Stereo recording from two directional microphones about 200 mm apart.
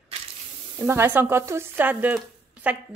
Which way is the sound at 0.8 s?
10° right (ahead or behind).